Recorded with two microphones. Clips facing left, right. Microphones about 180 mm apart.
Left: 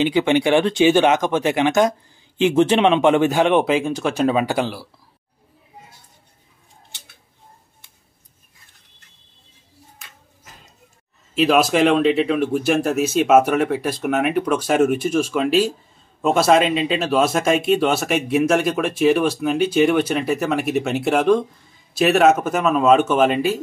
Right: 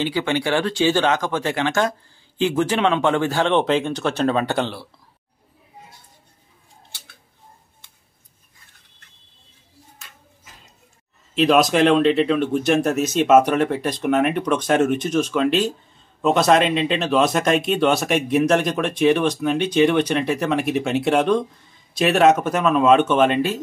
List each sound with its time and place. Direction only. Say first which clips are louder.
0.0 s speech: left 5 dB; 20° left (ahead or behind)
11.3 s speech: even; 5° left (ahead or behind)